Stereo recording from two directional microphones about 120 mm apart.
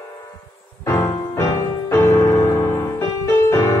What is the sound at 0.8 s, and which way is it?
Music, 30° left (ahead or behind).